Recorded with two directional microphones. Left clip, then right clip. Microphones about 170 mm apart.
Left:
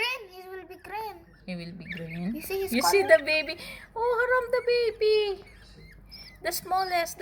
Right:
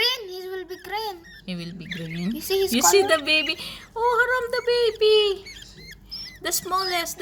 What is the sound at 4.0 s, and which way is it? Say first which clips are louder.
Speech: right 4 dB; 15° right (ahead or behind).